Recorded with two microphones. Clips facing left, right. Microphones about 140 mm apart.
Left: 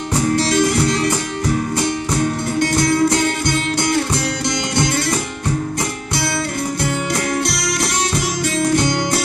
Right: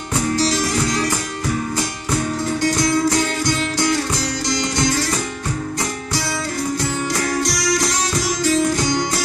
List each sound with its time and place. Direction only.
0.4 s music: 65° left (ahead or behind)
2.6 s music: 65° left (ahead or behind)
7.4 s music: 60° left (ahead or behind)